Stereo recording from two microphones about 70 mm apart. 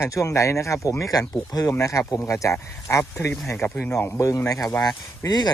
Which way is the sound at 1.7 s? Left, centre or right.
Left.